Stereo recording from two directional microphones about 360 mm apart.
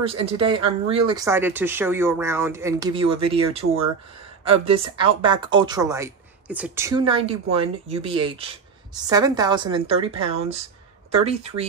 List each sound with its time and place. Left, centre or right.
0.0 s speech: centre